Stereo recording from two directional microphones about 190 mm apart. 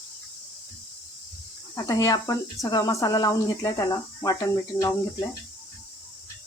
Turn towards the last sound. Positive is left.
turn(degrees=15)  # may be behind; listen again after turning